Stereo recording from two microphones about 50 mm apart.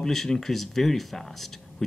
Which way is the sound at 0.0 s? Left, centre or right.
Centre.